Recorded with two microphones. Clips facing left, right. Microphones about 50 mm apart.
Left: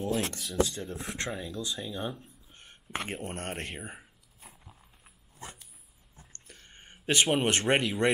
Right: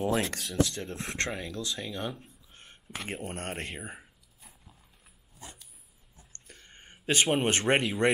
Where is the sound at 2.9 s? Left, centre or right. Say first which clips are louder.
Left 5 dB; centre.